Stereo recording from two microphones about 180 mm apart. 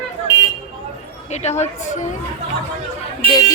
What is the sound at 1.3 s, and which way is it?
Speech, 40° left (ahead or behind).